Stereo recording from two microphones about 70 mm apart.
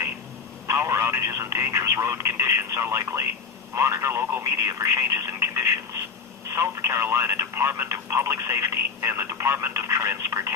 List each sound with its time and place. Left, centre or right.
0.7 s speech: right
4.5 s speech: right